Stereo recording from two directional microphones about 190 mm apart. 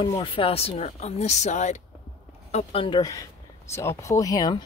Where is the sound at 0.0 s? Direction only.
25° left (ahead or behind).